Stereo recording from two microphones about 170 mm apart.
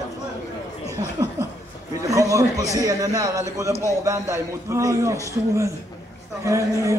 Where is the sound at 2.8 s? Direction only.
20° right (ahead or behind).